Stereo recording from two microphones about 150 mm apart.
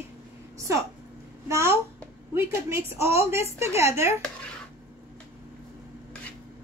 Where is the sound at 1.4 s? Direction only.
20° right (ahead or behind).